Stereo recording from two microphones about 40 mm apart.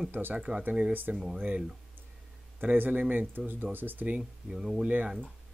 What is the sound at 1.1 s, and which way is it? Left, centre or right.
Speech, right.